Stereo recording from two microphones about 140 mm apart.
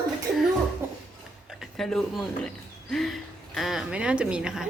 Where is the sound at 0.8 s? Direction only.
15° right (ahead or behind).